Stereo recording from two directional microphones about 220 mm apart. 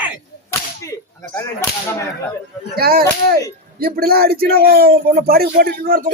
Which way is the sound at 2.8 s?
40° right (ahead or behind).